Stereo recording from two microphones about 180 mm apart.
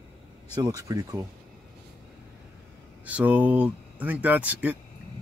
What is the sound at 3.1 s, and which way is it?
Speech, 10° right (ahead or behind).